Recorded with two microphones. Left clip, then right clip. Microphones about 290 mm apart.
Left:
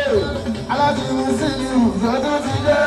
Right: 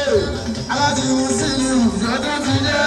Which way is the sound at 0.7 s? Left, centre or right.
Left.